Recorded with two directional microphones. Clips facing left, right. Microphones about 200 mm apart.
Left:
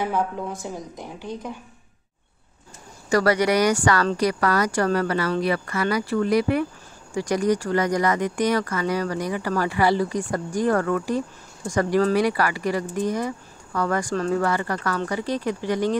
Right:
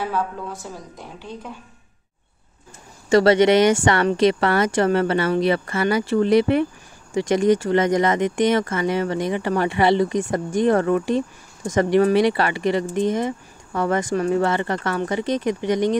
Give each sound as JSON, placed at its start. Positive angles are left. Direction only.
{"t": 0.0, "sound": "a woman's voice", "side_deg": 15}
{"t": 3.1, "sound": "speech", "side_deg": -25}